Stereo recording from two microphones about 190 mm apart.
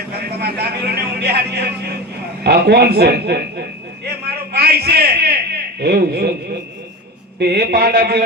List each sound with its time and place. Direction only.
0.3 s a man's voice: 55° right (ahead or behind)
4.5 s a sound: 55° right (ahead or behind)
5.8 s speech: 55° right (ahead or behind)
7.3 s speech: 55° right (ahead or behind)